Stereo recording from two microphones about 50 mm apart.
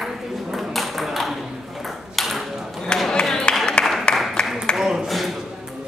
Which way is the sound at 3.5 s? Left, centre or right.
Left.